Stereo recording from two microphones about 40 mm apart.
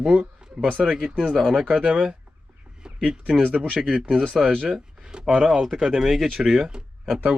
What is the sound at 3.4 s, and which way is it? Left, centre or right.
Speech, right.